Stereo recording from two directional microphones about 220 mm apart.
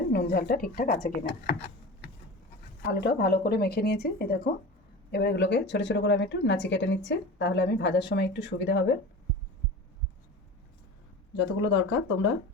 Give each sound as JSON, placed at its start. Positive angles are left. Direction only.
{"t": 0.1, "sound": "speech", "side_deg": 45}
{"t": 2.8, "sound": "a woman's voice", "side_deg": 50}
{"t": 11.3, "sound": "speech", "side_deg": 60}